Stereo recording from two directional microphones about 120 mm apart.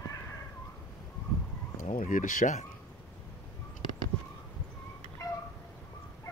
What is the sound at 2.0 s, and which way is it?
Speech, 90° left.